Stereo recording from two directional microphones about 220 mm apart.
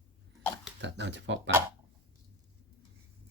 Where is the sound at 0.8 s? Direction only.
55° right (ahead or behind).